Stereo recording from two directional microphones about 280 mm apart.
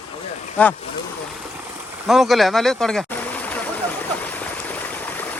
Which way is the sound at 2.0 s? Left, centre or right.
Centre.